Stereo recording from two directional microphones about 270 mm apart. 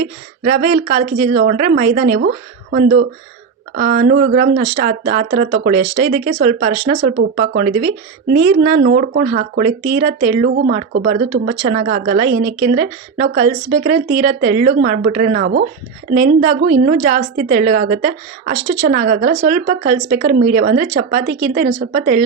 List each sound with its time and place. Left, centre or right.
0.0 s speech: right